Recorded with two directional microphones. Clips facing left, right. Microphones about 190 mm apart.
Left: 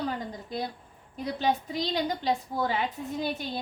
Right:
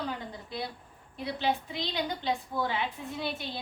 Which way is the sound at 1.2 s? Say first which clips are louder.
Left 3 dB; 40° left (ahead or behind).